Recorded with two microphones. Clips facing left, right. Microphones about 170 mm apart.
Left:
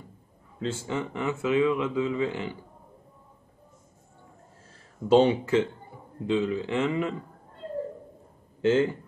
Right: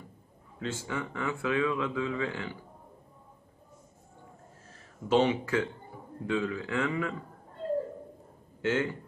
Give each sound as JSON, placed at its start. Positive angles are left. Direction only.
{"t": 0.6, "sound": "speech", "side_deg": 30}
{"t": 5.0, "sound": "speech", "side_deg": 30}
{"t": 8.6, "sound": "speech", "side_deg": 30}